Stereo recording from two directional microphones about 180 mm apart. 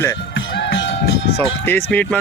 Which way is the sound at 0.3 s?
90° left.